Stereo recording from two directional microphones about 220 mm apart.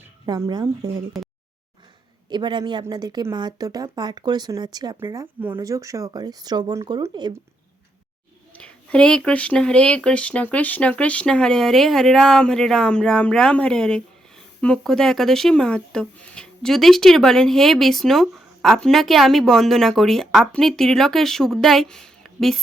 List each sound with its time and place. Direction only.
0.3 s speech: 20° right (ahead or behind)
2.3 s speech: 20° right (ahead or behind)
8.5 s speech: 5° left (ahead or behind)